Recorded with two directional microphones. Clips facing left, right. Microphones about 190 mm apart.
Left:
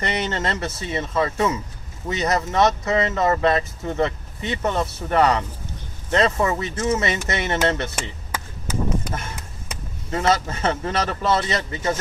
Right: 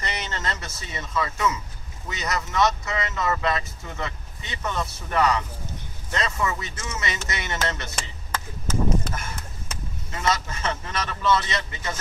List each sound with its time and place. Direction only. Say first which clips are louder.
0.1 s speech: left 6 dB; 30° left (ahead or behind)
7.9 s chop: left 2 dB; 10° left (ahead or behind)
10.1 s speech: left 6 dB; 35° left (ahead or behind)